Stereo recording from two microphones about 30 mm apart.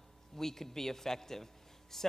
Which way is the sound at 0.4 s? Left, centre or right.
Centre.